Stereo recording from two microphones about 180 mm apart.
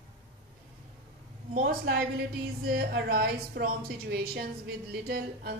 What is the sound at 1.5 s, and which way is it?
A woman's voice, 50° right (ahead or behind).